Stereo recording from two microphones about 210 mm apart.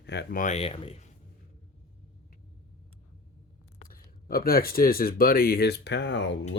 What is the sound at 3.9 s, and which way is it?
Speech, 45° left (ahead or behind).